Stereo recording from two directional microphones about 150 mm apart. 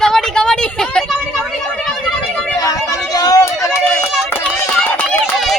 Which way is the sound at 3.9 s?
5° left (ahead or behind).